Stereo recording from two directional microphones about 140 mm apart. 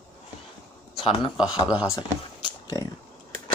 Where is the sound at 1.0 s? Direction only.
35° left (ahead or behind).